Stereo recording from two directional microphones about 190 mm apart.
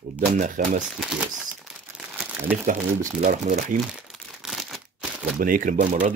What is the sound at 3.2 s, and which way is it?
Speech, 40° right (ahead or behind).